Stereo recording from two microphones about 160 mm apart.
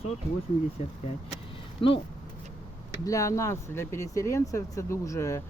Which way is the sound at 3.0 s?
20° left (ahead or behind).